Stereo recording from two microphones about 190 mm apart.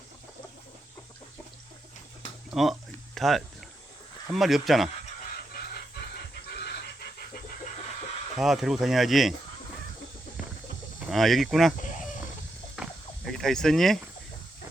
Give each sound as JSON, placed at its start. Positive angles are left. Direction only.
{"t": 2.5, "sound": "speech", "side_deg": 0}
{"t": 6.5, "sound": "pant", "side_deg": 60}
{"t": 8.4, "sound": "speech", "side_deg": 0}
{"t": 11.1, "sound": "speech", "side_deg": 0}
{"t": 11.8, "sound": "a sound", "side_deg": 45}
{"t": 12.7, "sound": "a sound", "side_deg": 0}